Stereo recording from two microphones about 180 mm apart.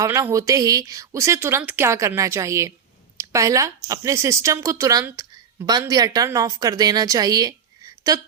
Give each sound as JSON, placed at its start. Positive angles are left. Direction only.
{"t": 0.0, "sound": "a woman's voice", "side_deg": -15}